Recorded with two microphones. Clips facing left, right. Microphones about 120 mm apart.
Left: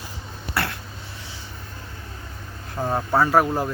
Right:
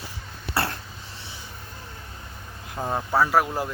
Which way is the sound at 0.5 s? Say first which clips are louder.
Even; 30° right (ahead or behind).